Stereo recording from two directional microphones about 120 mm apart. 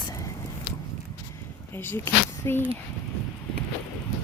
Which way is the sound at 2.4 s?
20° left (ahead or behind).